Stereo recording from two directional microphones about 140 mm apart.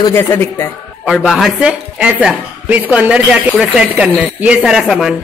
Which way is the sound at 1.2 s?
Centre (ahead or behind).